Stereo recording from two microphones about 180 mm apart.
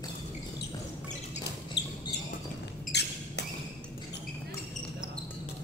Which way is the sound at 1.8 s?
70° left (ahead or behind).